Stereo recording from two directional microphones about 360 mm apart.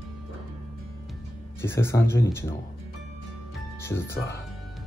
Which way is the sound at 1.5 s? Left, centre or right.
Centre.